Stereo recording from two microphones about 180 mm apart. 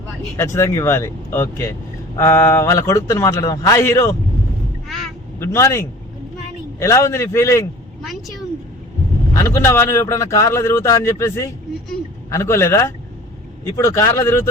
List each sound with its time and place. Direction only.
0.3 s speech: 15° left (ahead or behind)
5.4 s speech: 15° left (ahead or behind)
9.4 s speech: 15° left (ahead or behind)